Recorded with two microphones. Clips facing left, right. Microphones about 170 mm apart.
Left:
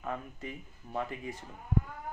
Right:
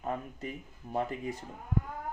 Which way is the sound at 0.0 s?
35° right (ahead or behind).